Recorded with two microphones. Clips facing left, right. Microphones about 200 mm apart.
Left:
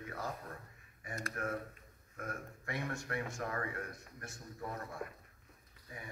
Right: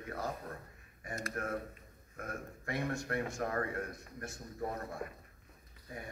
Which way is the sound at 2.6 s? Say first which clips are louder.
Right 5 dB; 40° right (ahead or behind).